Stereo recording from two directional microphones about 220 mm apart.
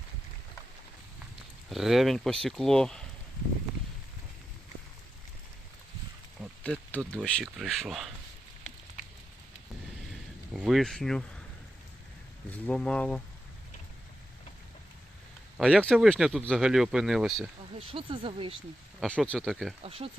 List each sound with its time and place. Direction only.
1.7 s speech: centre (ahead or behind)
6.4 s speech: 5° left (ahead or behind)
10.1 s a sound: centre (ahead or behind)
12.5 s speech: 5° left (ahead or behind)
15.5 s speech: centre (ahead or behind)
17.7 s speech: 25° right (ahead or behind)
18.9 s speech: 5° left (ahead or behind)
19.8 s speech: 25° right (ahead or behind)